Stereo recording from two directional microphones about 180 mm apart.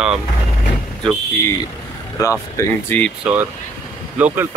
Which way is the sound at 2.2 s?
15° left (ahead or behind).